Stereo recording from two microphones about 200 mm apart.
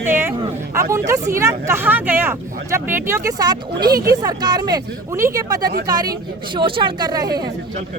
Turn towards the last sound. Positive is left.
turn(degrees=-20)  # may be behind; listen again after turning